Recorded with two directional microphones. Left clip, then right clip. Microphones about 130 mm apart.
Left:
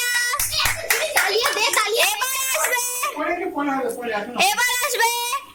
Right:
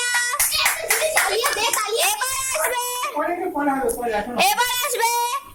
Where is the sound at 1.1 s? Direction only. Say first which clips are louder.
Left 1 dB; 90° left.